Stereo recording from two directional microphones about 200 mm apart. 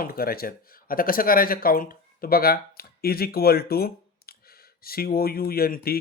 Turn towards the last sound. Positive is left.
turn(degrees=50)  # may be behind; listen again after turning